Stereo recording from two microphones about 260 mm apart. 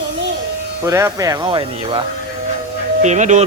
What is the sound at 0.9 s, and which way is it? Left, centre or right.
Speech, centre.